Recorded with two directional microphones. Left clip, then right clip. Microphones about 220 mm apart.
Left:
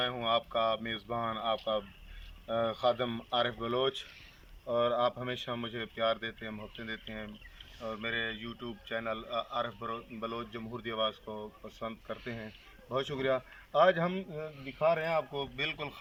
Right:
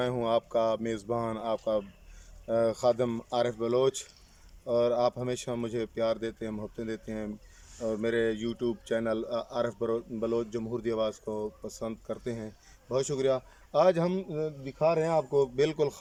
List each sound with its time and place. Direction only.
0.0 s a man's voice: 30° right (ahead or behind)